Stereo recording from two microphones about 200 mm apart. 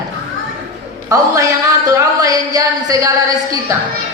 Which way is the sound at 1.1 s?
15° right (ahead or behind).